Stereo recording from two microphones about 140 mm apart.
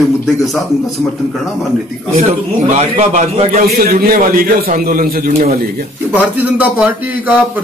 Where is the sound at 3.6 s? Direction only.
90° right.